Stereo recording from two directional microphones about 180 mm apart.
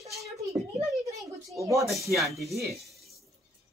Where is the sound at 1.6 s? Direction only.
15° right (ahead or behind).